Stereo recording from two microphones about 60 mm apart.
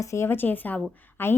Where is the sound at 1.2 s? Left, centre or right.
Left.